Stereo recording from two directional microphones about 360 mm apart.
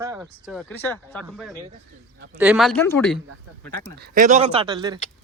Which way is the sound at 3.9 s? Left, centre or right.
Right.